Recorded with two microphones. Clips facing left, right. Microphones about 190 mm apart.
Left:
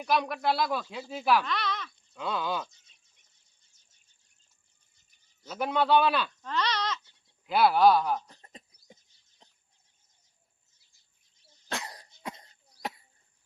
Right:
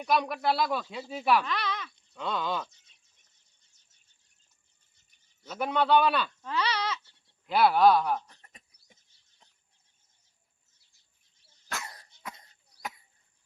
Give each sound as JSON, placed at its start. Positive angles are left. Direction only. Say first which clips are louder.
{"t": 0.0, "sound": "speech", "louder": "even", "side_deg": 0}
{"t": 1.5, "sound": "speech", "louder": "even", "side_deg": -10}
{"t": 2.1, "sound": "speech", "louder": "even", "side_deg": 5}
{"t": 5.4, "sound": "speech", "louder": "even", "side_deg": 0}
{"t": 6.5, "sound": "sheep", "louder": "even", "side_deg": -10}
{"t": 7.4, "sound": "speech", "louder": "even", "side_deg": 0}
{"t": 8.3, "sound": "a sound", "louder": "left 6 dB", "side_deg": 30}
{"t": 11.7, "sound": "cough", "louder": "left 3 dB", "side_deg": 25}